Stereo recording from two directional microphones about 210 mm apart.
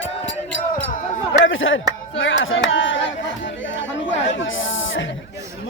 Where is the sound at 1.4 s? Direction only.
65° left (ahead or behind).